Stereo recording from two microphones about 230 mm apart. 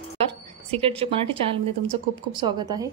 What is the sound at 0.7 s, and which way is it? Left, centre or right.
A woman's voice, right.